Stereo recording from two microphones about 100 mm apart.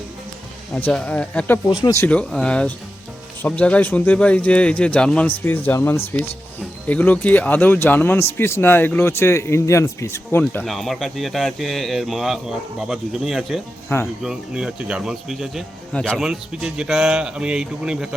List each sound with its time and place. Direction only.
0.7 s speech: 10° left (ahead or behind); by 10.4 s 30° left (ahead or behind)
10.6 s speech: centre (ahead or behind)
15.9 s speech: 10° left (ahead or behind)
16.1 s speech: 5° right (ahead or behind)